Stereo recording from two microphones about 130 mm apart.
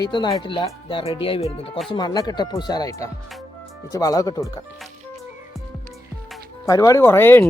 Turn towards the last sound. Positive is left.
turn(degrees=15)  # may be behind; listen again after turning